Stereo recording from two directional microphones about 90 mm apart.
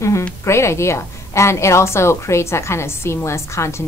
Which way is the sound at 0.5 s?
30° left (ahead or behind).